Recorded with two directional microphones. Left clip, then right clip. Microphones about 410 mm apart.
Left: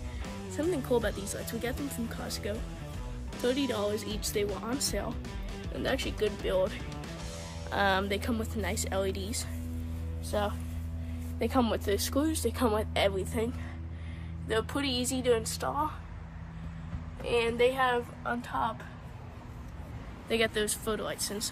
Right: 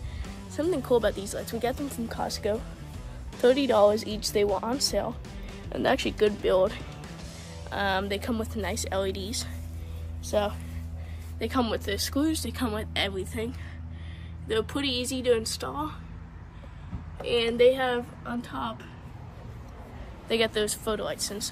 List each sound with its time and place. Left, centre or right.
0.6 s speech: centre
5.8 s speech: centre
7.7 s a woman's voice: centre
11.3 s speech: centre
17.2 s speech: centre
20.2 s speech: centre